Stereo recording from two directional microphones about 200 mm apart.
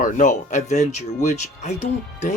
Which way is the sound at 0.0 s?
40° left (ahead or behind).